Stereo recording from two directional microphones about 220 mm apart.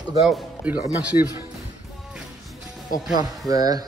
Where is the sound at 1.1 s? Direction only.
25° left (ahead or behind).